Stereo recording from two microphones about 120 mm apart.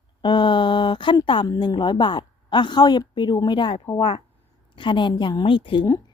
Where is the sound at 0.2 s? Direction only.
40° left (ahead or behind).